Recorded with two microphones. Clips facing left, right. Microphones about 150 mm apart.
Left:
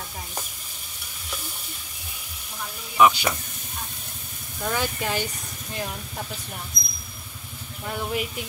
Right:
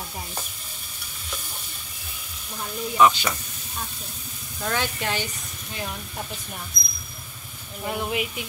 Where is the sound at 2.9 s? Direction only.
10° left (ahead or behind).